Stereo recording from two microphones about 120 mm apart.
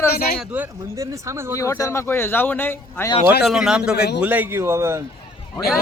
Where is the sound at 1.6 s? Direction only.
25° left (ahead or behind).